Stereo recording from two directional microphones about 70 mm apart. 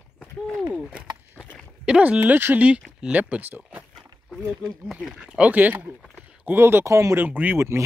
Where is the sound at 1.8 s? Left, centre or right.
Centre.